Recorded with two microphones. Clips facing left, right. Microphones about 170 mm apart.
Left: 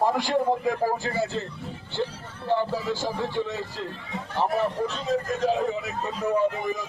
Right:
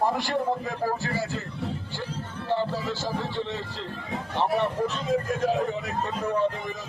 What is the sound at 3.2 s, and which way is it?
Speech, 10° left (ahead or behind).